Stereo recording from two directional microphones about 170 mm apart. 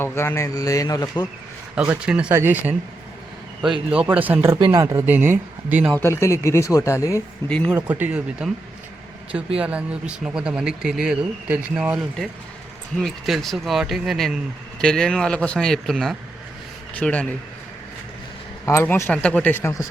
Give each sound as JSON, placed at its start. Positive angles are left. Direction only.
{"t": 0.0, "sound": "a man's voice", "side_deg": 15}
{"t": 1.7, "sound": "speech", "side_deg": -5}
{"t": 4.5, "sound": "speech", "side_deg": -25}
{"t": 5.9, "sound": "speech", "side_deg": 15}
{"t": 7.9, "sound": "speech", "side_deg": -10}
{"t": 9.6, "sound": "speech", "side_deg": -5}
{"t": 18.6, "sound": "speech", "side_deg": 15}